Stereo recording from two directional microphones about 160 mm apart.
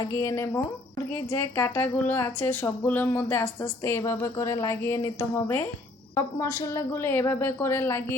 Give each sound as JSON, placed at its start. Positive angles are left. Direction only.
{"t": 0.0, "sound": "speech", "side_deg": 20}